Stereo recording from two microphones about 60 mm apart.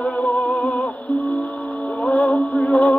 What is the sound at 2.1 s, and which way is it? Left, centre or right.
Music, centre.